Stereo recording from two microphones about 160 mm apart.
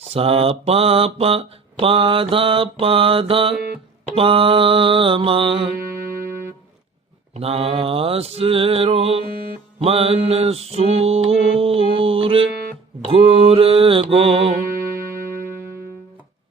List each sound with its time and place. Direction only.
0.0 s mantra: 40° right (ahead or behind)
7.3 s mantra: 40° right (ahead or behind)